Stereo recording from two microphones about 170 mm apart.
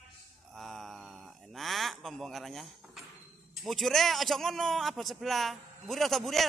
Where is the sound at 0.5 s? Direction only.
Centre (ahead or behind).